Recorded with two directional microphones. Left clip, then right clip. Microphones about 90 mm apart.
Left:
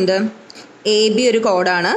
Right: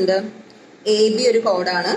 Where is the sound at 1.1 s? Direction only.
75° left (ahead or behind).